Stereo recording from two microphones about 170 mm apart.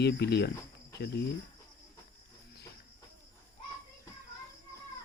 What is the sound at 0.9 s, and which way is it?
Cricket, 75° left (ahead or behind).